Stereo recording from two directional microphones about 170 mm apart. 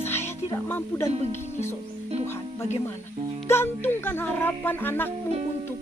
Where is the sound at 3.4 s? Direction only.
15° left (ahead or behind).